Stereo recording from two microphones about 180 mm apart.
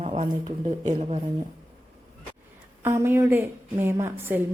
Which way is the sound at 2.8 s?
15° right (ahead or behind).